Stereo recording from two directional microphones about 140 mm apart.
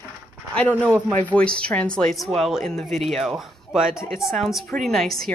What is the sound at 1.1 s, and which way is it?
Speech, 10° left (ahead or behind).